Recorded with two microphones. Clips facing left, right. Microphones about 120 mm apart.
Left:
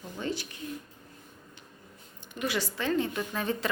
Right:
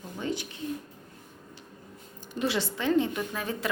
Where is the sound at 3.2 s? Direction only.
5° right (ahead or behind).